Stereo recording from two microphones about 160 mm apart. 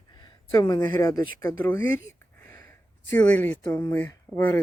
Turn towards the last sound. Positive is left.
turn(degrees=15)  # may be behind; listen again after turning